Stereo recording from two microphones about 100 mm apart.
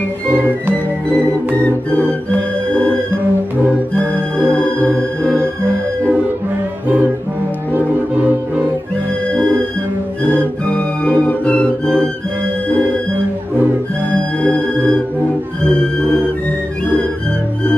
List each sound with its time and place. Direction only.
1.5 s music: 15° left (ahead or behind)
7.7 s music: 15° right (ahead or behind)
10.7 s music: 15° left (ahead or behind)